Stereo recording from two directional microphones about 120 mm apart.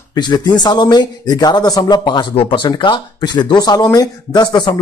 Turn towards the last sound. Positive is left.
turn(degrees=35)  # may be behind; listen again after turning